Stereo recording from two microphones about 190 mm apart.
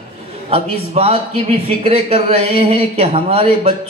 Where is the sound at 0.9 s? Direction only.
30° right (ahead or behind).